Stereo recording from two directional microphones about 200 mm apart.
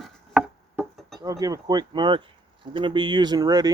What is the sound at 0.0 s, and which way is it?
Chopping, centre (ahead or behind).